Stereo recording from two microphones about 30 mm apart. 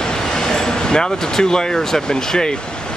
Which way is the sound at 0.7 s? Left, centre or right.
Left.